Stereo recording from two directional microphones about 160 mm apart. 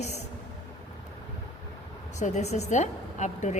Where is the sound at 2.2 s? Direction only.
45° left (ahead or behind).